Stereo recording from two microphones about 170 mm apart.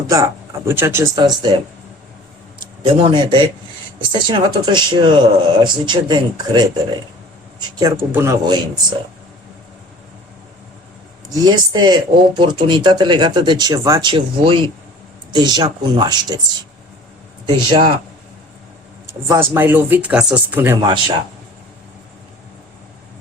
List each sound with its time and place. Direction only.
0.1 s speech: 15° right (ahead or behind)
2.6 s speech: 25° right (ahead or behind)
11.3 s speech: 25° right (ahead or behind)
17.7 s speech: 30° right (ahead or behind)
19.3 s speech: 15° right (ahead or behind)